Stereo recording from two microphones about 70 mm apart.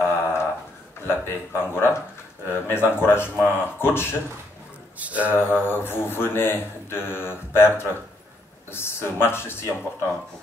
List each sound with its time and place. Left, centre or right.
0.0 s a sound: left
1.0 s speech: left
4.9 s speech: right
5.3 s speech: left